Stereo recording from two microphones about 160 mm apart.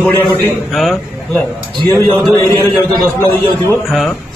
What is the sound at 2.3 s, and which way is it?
Speech, 20° left (ahead or behind).